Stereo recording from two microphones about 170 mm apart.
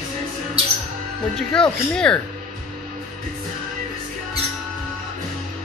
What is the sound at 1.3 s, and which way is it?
Speech, 5° left (ahead or behind).